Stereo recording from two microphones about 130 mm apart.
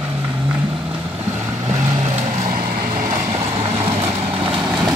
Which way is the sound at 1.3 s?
25° right (ahead or behind).